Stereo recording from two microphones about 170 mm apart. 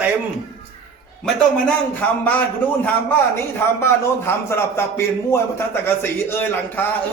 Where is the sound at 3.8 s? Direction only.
15° left (ahead or behind).